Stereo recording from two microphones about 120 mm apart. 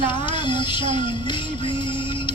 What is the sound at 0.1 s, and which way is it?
Music, 40° left (ahead or behind).